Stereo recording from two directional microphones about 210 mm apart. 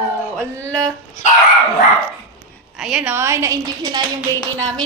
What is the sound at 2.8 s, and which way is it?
A woman's voice, 5° right (ahead or behind).